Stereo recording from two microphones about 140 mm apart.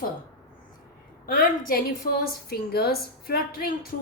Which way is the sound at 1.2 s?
90° left.